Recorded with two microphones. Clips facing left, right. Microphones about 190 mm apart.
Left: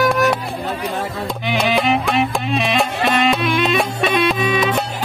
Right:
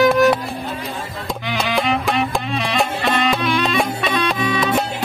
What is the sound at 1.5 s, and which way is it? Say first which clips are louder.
Music: left 3 dB; 15° left (ahead or behind).